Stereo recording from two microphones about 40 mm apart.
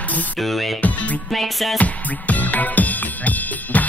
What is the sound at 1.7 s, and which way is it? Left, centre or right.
Music, left.